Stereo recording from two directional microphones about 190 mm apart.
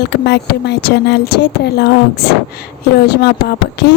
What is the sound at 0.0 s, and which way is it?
A woman's voice, 60° left (ahead or behind).